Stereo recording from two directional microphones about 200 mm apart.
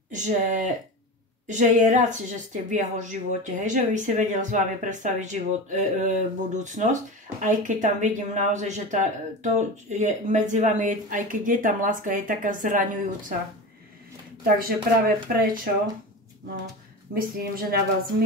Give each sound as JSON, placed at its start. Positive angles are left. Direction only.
{"t": 0.1, "sound": "a woman's voice", "side_deg": -40}
{"t": 14.4, "sound": "speech", "side_deg": -45}
{"t": 17.1, "sound": "speech", "side_deg": -45}